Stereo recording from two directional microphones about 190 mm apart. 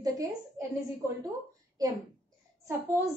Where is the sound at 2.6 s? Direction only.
15° right (ahead or behind).